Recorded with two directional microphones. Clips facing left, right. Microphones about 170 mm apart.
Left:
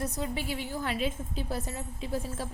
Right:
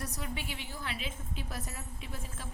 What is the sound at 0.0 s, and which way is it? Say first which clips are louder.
A woman's voice: left 7 dB; 35° left (ahead or behind).